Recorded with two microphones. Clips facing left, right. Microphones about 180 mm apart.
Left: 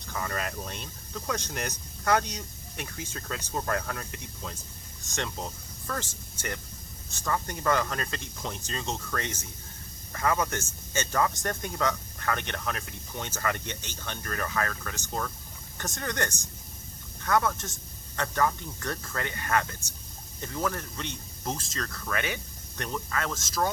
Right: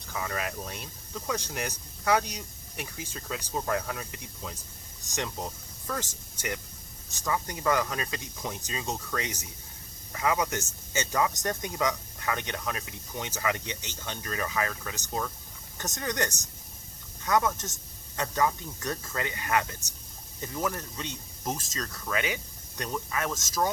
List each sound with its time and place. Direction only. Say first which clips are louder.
0.0 s speech: even; 5° right (ahead or behind)